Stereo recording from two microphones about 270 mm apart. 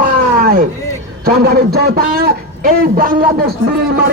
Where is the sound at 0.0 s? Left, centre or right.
Right.